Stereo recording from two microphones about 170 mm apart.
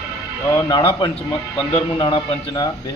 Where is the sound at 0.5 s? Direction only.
25° left (ahead or behind).